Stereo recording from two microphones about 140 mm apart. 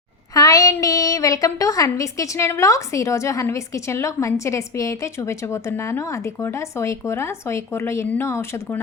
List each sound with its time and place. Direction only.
0.3 s a woman's voice: 25° left (ahead or behind)